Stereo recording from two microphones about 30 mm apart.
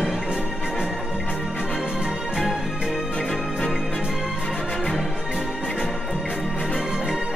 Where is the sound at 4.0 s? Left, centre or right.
Right.